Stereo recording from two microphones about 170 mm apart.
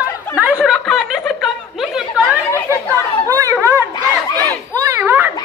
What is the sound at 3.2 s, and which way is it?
Chatter, 20° right (ahead or behind).